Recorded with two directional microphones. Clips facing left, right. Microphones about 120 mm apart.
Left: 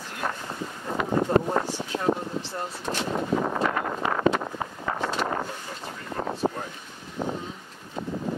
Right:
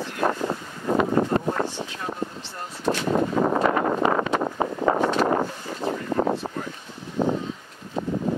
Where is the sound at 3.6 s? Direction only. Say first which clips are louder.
Right 6 dB; 35° right (ahead or behind).